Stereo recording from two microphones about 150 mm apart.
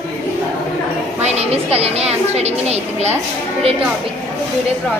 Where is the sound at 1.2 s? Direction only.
45° right (ahead or behind).